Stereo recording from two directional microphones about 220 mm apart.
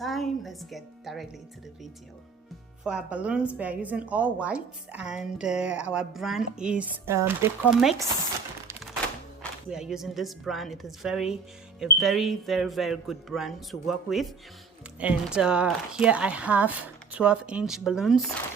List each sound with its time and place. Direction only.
0.0 s a woman's voice: centre (ahead or behind)
2.8 s a woman's voice: 5° right (ahead or behind)
9.4 s a woman's voice: 5° right (ahead or behind)